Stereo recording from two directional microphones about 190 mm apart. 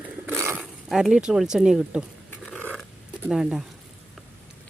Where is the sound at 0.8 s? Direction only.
Centre (ahead or behind).